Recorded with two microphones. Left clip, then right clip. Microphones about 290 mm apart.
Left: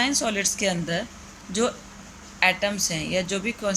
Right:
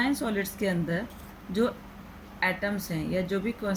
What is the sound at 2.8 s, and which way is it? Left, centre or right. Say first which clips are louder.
Speech: left 6 dB; left.